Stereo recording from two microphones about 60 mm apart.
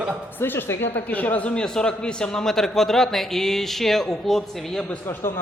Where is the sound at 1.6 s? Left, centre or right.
Centre.